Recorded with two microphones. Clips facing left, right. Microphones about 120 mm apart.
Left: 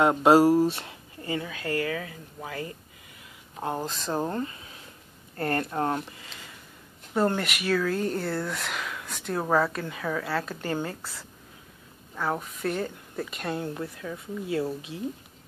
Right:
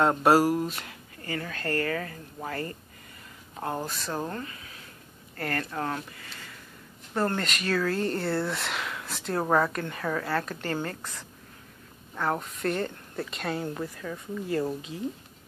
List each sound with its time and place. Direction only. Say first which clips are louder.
0.0 s speech: left 3 dB; 15° left (ahead or behind)
1.4 s speech: right 2 dB; 10° left (ahead or behind)
3.8 s speech: left 3 dB; 20° left (ahead or behind)
7.2 s speech: left 3 dB; 15° left (ahead or behind)
10.6 s speech: left 1 dB; 15° left (ahead or behind)